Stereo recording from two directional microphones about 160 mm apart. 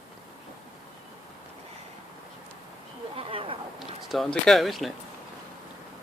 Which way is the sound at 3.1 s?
35° right (ahead or behind).